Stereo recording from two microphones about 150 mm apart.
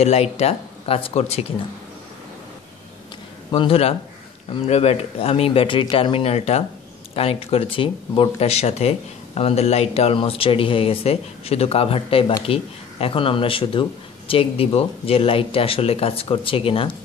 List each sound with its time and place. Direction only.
0.0 s speech: 45° left (ahead or behind)
3.5 s speech: 40° left (ahead or behind)